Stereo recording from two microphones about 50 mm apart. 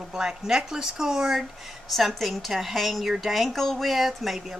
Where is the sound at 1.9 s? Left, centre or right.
Centre.